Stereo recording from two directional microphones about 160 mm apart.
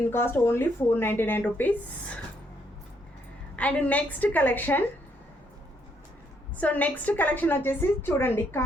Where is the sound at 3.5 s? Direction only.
10° left (ahead or behind).